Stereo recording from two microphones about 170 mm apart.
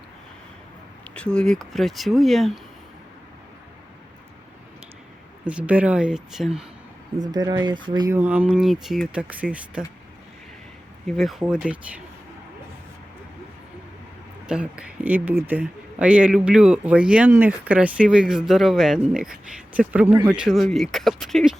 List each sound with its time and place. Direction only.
1.0 s speech: 5° left (ahead or behind)
5.5 s speech: 10° right (ahead or behind)
7.2 s speech: 25° right (ahead or behind)
8.2 s speech: 10° right (ahead or behind)
11.0 s speech: centre (ahead or behind)
14.4 s speech: 5° right (ahead or behind)